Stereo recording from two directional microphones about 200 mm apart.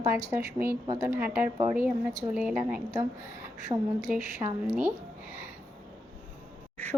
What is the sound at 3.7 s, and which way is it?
Speech, 15° right (ahead or behind).